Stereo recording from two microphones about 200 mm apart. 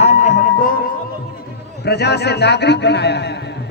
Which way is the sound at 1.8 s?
55° left (ahead or behind).